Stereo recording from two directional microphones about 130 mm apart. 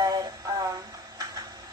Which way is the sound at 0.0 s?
30° right (ahead or behind).